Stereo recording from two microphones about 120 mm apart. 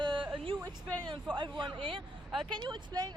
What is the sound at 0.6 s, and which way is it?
Speech, 35° right (ahead or behind).